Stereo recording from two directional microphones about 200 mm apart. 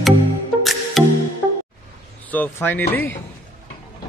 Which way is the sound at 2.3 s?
10° left (ahead or behind).